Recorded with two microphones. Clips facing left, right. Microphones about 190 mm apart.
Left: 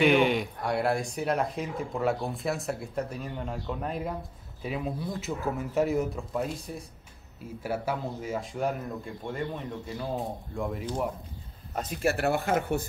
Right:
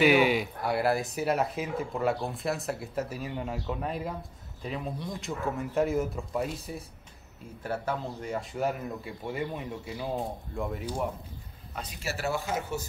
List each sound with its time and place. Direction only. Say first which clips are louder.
0.0 s speech: even; 5° right (ahead or behind)
7.6 s speech: left 1 dB; 10° left (ahead or behind)
11.7 s speech: left 8 dB; 50° left (ahead or behind)